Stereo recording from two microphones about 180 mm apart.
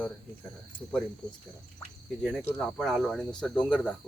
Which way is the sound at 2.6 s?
Centre (ahead or behind).